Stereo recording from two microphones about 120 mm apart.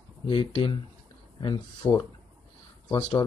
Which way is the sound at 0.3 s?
45° left (ahead or behind).